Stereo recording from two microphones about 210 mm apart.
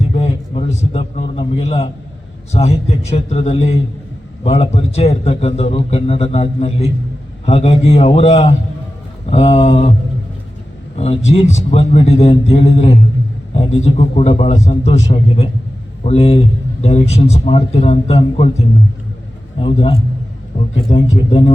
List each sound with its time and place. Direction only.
0.1 s a sound: 30° left (ahead or behind)
2.5 s a man's voice: 30° left (ahead or behind)
10.9 s a man's voice: 30° left (ahead or behind)
19.5 s a man's voice: 25° left (ahead or behind)